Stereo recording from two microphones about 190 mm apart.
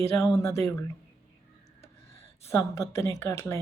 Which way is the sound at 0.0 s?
15° left (ahead or behind).